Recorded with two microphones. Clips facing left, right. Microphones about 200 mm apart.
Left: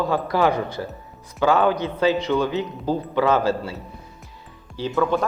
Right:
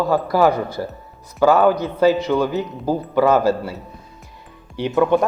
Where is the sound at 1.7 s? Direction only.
40° right (ahead or behind).